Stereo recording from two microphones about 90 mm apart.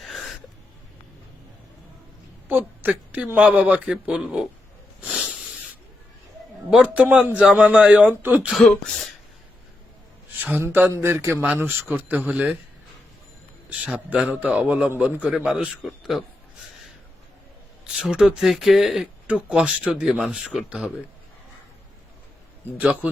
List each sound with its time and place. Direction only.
0.0 s a sound: centre (ahead or behind)
2.5 s a woman's voice: 20° right (ahead or behind)
5.0 s a sound: 5° right (ahead or behind)
6.7 s speech: 10° right (ahead or behind)
8.5 s speech: 5° left (ahead or behind)
10.4 s speech: 25° right (ahead or behind)
13.7 s speech: 15° right (ahead or behind)
18.0 s speech: 10° right (ahead or behind)